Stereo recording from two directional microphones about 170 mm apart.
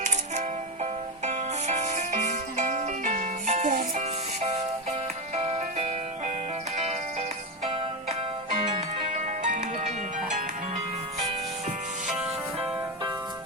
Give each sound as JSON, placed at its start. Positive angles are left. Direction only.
{"t": 0.0, "sound": "music", "side_deg": -40}